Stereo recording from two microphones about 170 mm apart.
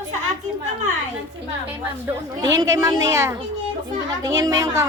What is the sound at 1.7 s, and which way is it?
A woman's voice, 15° right (ahead or behind).